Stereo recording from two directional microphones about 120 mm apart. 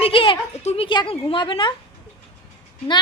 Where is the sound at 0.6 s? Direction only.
65° left (ahead or behind).